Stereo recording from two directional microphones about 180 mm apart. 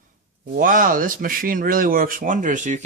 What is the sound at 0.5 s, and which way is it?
Speech, 50° right (ahead or behind).